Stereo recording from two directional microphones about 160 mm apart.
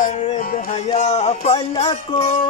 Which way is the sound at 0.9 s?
45° left (ahead or behind).